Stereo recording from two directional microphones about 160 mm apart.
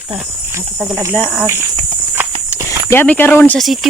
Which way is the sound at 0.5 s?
15° right (ahead or behind).